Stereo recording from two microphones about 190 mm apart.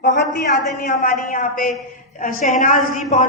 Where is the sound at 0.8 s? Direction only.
45° left (ahead or behind).